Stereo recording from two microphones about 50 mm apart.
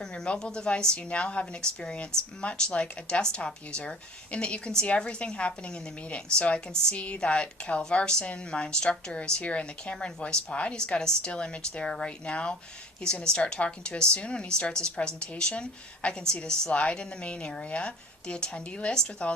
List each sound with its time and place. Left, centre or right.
0.0 s a woman's voice: centre